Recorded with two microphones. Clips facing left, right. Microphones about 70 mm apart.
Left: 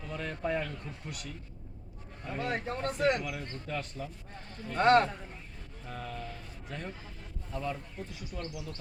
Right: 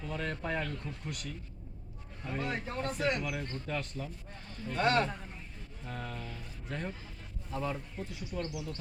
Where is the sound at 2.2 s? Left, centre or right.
Centre.